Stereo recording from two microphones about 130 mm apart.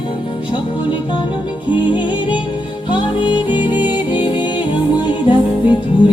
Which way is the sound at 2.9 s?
35° left (ahead or behind).